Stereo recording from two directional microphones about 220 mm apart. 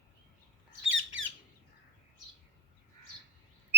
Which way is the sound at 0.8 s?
60° right (ahead or behind).